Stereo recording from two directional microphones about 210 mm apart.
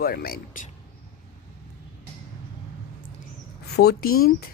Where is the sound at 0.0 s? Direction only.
45° left (ahead or behind).